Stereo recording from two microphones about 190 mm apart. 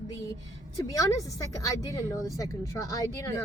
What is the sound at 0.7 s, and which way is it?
A woman's voice, 20° left (ahead or behind).